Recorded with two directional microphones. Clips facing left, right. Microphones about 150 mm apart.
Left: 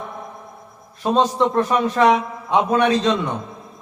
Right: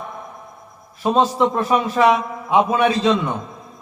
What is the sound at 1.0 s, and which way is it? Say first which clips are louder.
A man's voice: right 1 dB; 5° right (ahead or behind).